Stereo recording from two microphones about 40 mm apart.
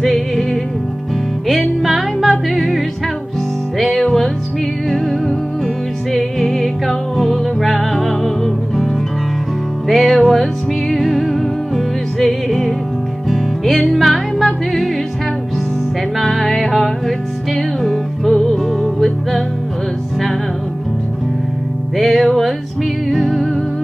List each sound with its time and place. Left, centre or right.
0.0 s music: centre
9.8 s music: centre
16.2 s music: centre
21.9 s music: centre